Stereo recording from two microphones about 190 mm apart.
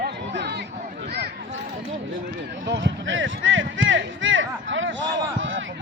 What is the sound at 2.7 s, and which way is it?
Music, 70° right (ahead or behind).